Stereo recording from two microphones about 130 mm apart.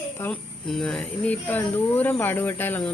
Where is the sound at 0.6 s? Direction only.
5° left (ahead or behind).